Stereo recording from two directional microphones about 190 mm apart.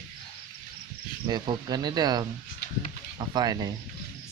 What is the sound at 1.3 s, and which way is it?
Speech, 20° right (ahead or behind).